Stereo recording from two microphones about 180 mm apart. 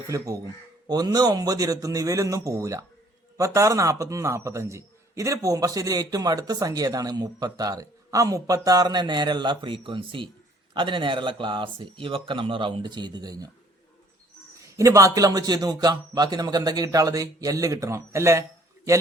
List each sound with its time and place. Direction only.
0.1 s a man's voice: 20° right (ahead or behind)
14.8 s a man's voice: 15° right (ahead or behind)